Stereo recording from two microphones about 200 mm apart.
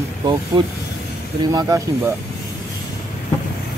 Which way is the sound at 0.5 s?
25° right (ahead or behind).